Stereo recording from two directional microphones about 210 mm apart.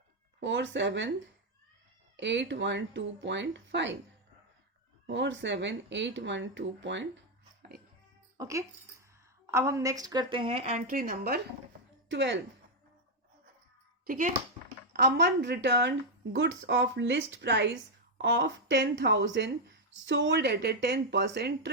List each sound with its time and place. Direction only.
0.3 s speech: 60° right (ahead or behind)
2.1 s speech: 60° right (ahead or behind)
5.0 s speech: 60° right (ahead or behind)
8.4 s a woman's voice: 15° right (ahead or behind); by 11.3 s 45° right (ahead or behind)
12.0 s a woman's voice: 55° right (ahead or behind)
14.1 s a child's voice: 40° right (ahead or behind)
14.9 s speech: 55° right (ahead or behind)